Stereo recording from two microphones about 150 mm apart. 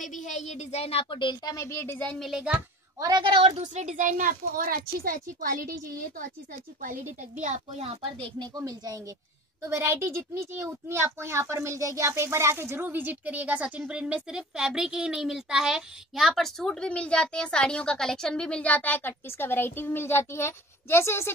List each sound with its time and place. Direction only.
0.0 s a woman's voice: 55° left (ahead or behind); by 2.0 s 15° left (ahead or behind)
2.0 s a woman's voice: centre (ahead or behind)
3.0 s a woman's voice: 30° right (ahead or behind)
3.7 s a woman's voice: 55° right (ahead or behind); by 21.3 s 15° left (ahead or behind)